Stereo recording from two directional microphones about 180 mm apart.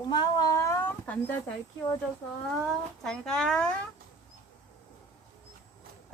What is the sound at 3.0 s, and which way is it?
Speech, 5° left (ahead or behind).